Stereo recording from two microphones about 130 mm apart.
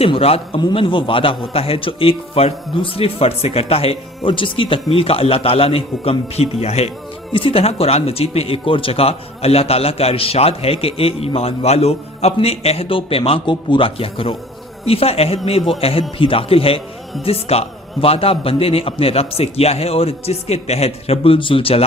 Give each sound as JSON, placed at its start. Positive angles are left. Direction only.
{"t": 0.0, "sound": "speech", "side_deg": 50}